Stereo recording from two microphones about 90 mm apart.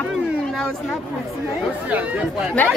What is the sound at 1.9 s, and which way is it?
Speech, 15° right (ahead or behind).